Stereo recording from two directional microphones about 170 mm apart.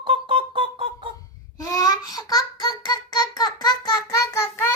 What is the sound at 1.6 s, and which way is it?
Child singing, 20° left (ahead or behind).